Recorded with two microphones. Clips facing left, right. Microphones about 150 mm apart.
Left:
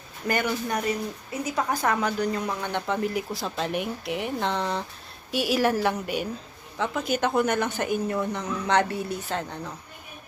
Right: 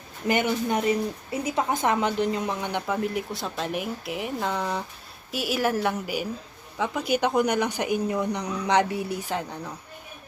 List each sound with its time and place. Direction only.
0.3 s a woman's voice: 20° right (ahead or behind)
2.8 s a woman's voice: centre (ahead or behind)